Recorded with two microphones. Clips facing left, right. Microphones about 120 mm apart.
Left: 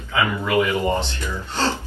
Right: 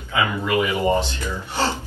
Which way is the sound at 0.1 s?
15° right (ahead or behind).